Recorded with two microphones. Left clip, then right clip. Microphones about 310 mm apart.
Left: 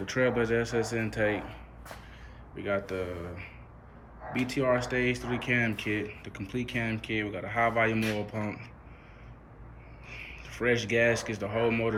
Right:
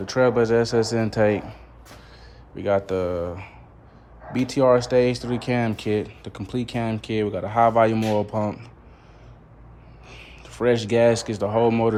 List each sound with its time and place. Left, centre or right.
0.0 s speech: centre
2.6 s speech: centre
10.2 s speech: centre
11.3 s speech: right
11.6 s speech: centre